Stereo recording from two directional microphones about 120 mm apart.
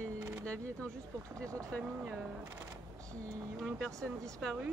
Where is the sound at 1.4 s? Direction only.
25° right (ahead or behind).